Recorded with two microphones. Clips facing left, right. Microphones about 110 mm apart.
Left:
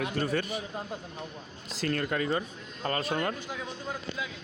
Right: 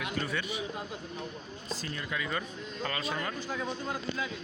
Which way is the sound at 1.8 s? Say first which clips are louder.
Left 9 dB; 70° left (ahead or behind).